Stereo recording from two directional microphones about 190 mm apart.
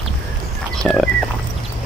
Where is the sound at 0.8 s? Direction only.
5° left (ahead or behind).